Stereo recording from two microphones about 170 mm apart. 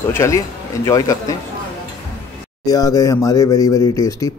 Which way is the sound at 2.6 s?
20° left (ahead or behind).